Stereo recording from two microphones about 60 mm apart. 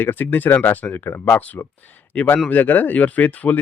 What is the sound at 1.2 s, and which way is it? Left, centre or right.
Speech, left.